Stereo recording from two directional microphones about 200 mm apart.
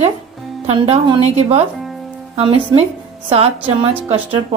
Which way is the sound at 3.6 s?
10° right (ahead or behind).